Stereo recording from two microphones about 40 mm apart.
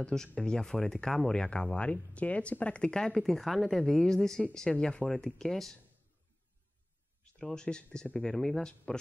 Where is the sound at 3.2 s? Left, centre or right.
Centre.